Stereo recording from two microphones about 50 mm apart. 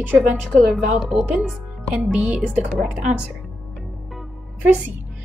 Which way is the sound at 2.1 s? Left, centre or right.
Right.